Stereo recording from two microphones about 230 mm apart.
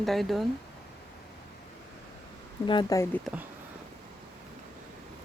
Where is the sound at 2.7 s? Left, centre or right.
Centre.